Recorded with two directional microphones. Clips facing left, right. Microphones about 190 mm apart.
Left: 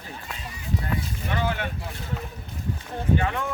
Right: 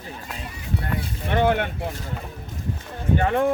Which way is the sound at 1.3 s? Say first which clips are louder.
Right 8 dB; 55° right (ahead or behind).